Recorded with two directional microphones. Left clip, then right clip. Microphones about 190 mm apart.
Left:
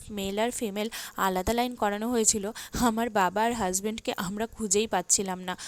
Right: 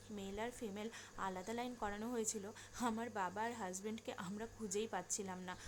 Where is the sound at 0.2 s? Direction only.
50° left (ahead or behind).